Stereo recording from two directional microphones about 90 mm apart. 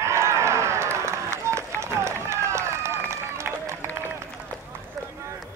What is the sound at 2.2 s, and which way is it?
Run, 30° right (ahead or behind).